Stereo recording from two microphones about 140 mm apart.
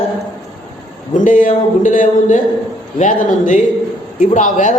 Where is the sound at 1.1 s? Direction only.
70° left (ahead or behind).